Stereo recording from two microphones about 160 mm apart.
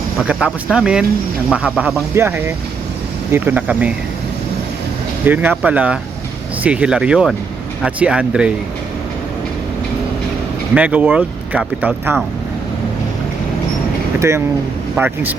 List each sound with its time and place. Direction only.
0.3 s speech: 5° right (ahead or behind)
2.1 s speech: 15° right (ahead or behind)
5.2 s speech: 10° right (ahead or behind)
10.8 s speech: 10° right (ahead or behind)
14.2 s speech: 15° right (ahead or behind)